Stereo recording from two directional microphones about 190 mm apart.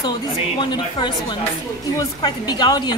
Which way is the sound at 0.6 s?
25° left (ahead or behind).